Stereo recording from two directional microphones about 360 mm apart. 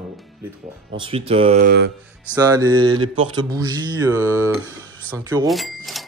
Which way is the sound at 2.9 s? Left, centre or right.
Right.